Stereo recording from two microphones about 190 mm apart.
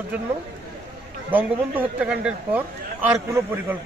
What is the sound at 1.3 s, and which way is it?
A man's voice, 10° right (ahead or behind).